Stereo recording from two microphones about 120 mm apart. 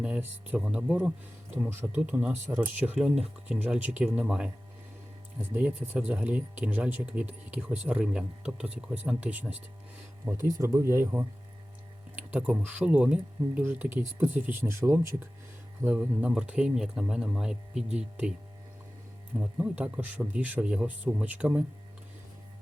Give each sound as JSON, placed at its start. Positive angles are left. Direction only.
{"t": 0.0, "sound": "speech", "side_deg": -10}
{"t": 10.2, "sound": "speech", "side_deg": -25}
{"t": 12.1, "sound": "a sound", "side_deg": -10}
{"t": 12.6, "sound": "speech", "side_deg": -10}
{"t": 19.4, "sound": "speech", "side_deg": -10}